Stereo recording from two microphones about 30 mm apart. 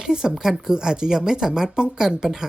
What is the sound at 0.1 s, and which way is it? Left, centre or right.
Speech, right.